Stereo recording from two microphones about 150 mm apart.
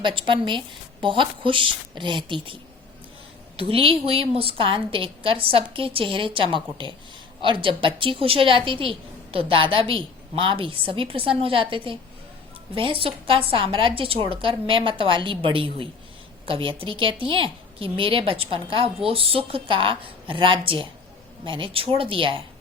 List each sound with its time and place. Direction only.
0.0 s a woman's voice: 35° right (ahead or behind)
3.6 s a woman's voice: 40° right (ahead or behind)